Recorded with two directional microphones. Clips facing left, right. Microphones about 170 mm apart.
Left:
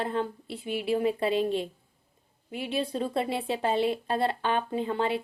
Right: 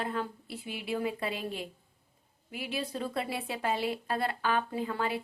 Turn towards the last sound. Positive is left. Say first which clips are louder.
# left 5 dB
turn(degrees=25)  # may be behind; listen again after turning